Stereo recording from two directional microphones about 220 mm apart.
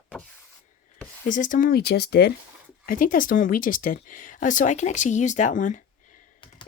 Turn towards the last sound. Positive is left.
turn(degrees=35)  # may be behind; listen again after turning